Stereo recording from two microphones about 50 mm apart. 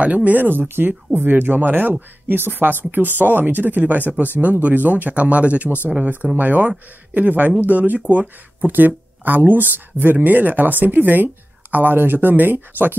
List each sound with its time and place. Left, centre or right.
0.0 s speech: right